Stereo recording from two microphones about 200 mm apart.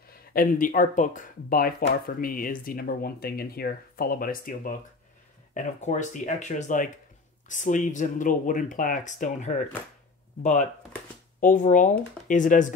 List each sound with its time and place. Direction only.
0.1 s speech: 45° left (ahead or behind)